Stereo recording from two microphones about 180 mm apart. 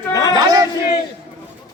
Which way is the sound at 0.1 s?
20° left (ahead or behind).